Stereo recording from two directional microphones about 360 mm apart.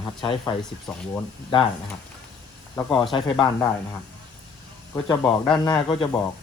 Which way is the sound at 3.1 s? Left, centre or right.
Centre.